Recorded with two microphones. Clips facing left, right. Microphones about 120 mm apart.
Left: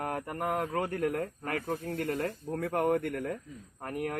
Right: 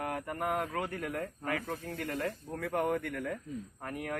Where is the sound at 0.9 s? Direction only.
45° left (ahead or behind).